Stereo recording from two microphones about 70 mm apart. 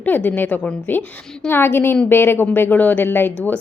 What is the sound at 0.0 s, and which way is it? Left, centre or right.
Speech, left.